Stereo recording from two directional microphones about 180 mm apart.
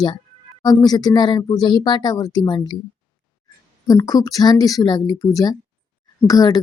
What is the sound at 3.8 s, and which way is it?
Speech, 20° left (ahead or behind).